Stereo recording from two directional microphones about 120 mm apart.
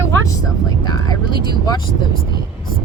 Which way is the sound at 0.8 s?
35° left (ahead or behind).